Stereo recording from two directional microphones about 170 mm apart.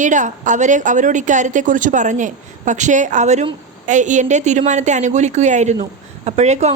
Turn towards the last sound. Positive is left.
turn(degrees=-40)  # may be behind; listen again after turning